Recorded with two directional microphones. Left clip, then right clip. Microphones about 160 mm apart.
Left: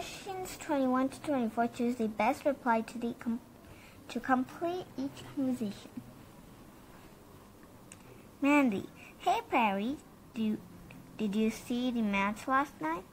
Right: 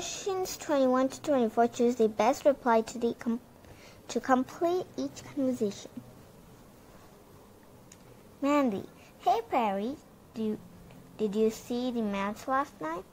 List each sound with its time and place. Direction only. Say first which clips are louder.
0.0 s a woman's voice: right 7 dB; 45° right (ahead or behind)
8.4 s a woman's voice: right 1 dB; 25° right (ahead or behind)